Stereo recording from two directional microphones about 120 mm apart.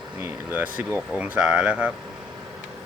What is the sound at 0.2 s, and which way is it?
Speech, 15° right (ahead or behind).